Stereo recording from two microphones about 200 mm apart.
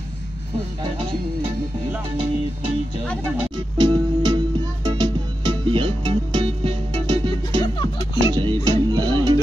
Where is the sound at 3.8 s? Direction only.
20° right (ahead or behind).